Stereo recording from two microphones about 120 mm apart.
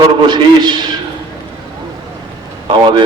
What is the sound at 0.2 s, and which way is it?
Speech, 40° right (ahead or behind).